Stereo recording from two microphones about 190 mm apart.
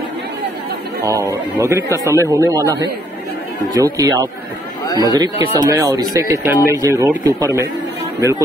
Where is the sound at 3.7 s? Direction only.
20° right (ahead or behind).